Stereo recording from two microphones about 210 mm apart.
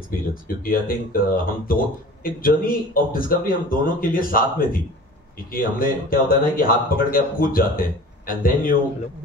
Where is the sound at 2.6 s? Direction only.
40° left (ahead or behind).